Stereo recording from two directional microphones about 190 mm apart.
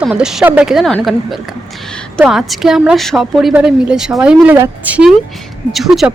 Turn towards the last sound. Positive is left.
turn(degrees=0)  # may be behind; listen again after turning